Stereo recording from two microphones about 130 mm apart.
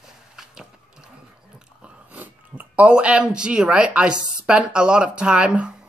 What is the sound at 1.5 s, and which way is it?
Chewing, 10° right (ahead or behind).